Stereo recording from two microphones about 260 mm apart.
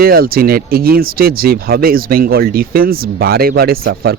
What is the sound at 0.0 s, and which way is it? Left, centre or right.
Speech, right.